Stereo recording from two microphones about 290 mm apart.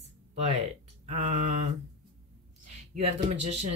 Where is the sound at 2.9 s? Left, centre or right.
Right.